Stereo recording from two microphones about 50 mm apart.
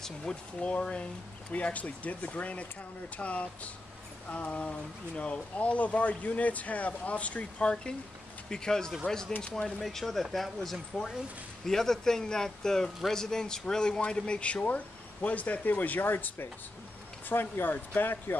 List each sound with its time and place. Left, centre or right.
0.0 s a man's voice: centre
9.8 s a man's voice: centre; by 18.2 s left